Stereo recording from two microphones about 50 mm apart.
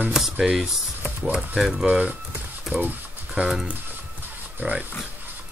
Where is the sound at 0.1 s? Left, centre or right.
Centre.